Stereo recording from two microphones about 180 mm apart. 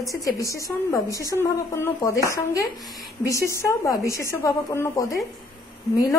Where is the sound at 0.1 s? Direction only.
20° left (ahead or behind).